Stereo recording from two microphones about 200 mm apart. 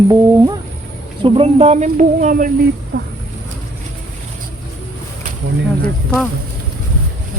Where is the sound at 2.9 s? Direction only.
55° right (ahead or behind).